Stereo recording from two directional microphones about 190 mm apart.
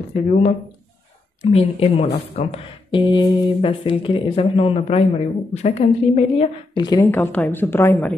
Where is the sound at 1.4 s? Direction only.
30° left (ahead or behind).